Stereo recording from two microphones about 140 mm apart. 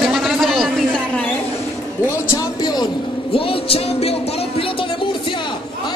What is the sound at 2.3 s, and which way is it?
Speech, 30° left (ahead or behind).